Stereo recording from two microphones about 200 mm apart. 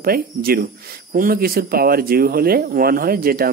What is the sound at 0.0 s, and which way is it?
Speech, 50° right (ahead or behind).